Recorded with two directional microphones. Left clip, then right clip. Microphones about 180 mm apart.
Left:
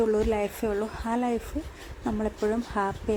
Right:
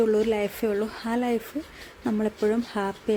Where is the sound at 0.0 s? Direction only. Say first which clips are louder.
Right 2 dB; 15° right (ahead or behind).